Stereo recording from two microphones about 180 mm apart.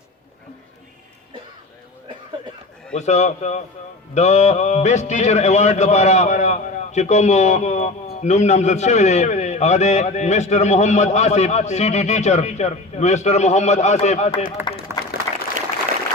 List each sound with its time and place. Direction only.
2.9 s a man's voice: 40° left (ahead or behind)
14.9 s applause: 15° right (ahead or behind)